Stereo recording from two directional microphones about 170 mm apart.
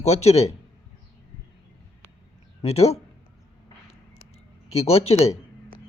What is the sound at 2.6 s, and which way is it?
Speech, 40° left (ahead or behind).